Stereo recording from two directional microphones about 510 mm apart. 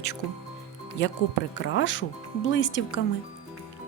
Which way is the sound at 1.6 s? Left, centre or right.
Left.